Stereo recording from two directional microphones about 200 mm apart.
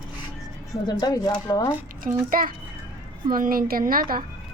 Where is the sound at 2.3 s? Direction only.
45° right (ahead or behind).